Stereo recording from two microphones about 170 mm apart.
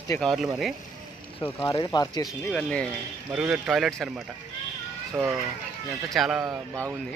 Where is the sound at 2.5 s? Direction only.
5° left (ahead or behind).